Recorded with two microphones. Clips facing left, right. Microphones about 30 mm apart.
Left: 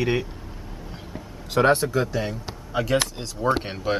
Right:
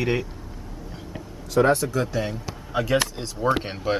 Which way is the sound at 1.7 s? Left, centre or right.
Left.